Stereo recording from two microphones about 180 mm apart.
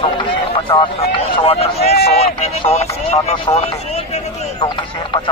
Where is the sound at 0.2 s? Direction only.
25° left (ahead or behind).